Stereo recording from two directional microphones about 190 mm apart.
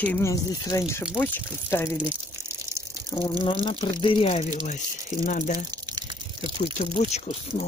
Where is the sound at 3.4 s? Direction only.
25° left (ahead or behind).